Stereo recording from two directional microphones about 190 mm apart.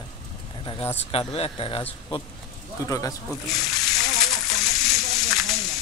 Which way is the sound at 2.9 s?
20° left (ahead or behind).